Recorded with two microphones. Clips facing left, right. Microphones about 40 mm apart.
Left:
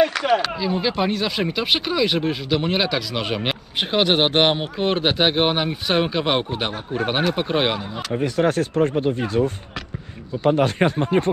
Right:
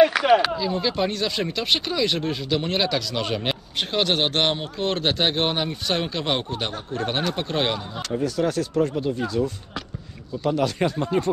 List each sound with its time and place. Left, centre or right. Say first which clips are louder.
0.0 s a sound: right 2 dB; centre
0.6 s speech: left 2 dB; centre
8.1 s speech: left 3 dB; left